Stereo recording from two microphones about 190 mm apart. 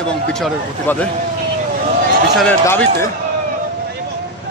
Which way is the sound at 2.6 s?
15° left (ahead or behind).